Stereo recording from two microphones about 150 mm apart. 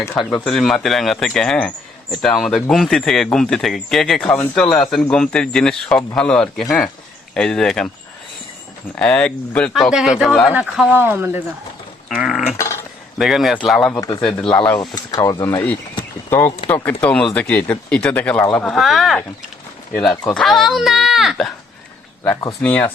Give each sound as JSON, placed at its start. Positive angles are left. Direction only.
{"t": 0.4, "sound": "speech", "side_deg": 0}
{"t": 9.0, "sound": "speech", "side_deg": 5}
{"t": 12.0, "sound": "mechanisms", "side_deg": -5}
{"t": 12.5, "sound": "speech", "side_deg": 20}
{"t": 13.1, "sound": "speech", "side_deg": 0}
{"t": 14.8, "sound": "speech", "side_deg": 25}
{"t": 16.6, "sound": "speech", "side_deg": 10}
{"t": 22.2, "sound": "speech", "side_deg": 15}